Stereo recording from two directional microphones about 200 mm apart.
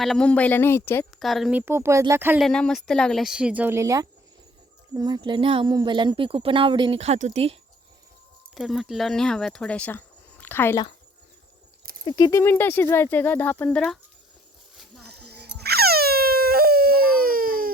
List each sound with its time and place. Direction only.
0.0 s speech: 5° left (ahead or behind)
1.2 s a woman's voice: centre (ahead or behind)
2.4 s speech: 5° left (ahead or behind); by 7.5 s 35° right (ahead or behind)
8.5 s speech: centre (ahead or behind)
12.0 s speech: 20° left (ahead or behind); by 14.0 s 5° left (ahead or behind)
15.0 s dog: 55° right (ahead or behind)